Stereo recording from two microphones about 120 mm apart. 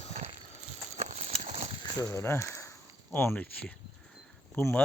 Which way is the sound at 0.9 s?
80° right.